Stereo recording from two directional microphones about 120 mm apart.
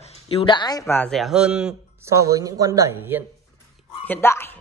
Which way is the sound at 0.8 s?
15° left (ahead or behind).